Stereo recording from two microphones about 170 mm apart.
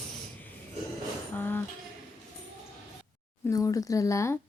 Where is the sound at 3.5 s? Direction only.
20° left (ahead or behind).